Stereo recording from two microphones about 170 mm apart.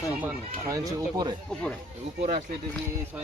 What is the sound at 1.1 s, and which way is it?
Speech, 25° right (ahead or behind).